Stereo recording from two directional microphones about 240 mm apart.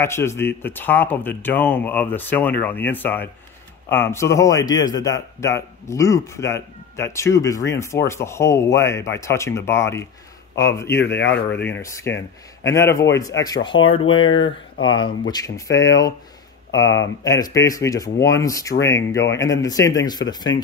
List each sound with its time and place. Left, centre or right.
0.0 s a man's voice: centre
13.7 s speech: left
15.2 s a man's voice: centre